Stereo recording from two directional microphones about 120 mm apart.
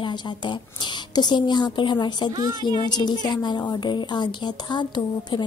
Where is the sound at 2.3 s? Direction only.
35° right (ahead or behind).